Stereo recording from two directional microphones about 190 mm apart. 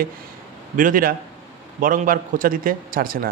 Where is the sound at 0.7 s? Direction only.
45° right (ahead or behind).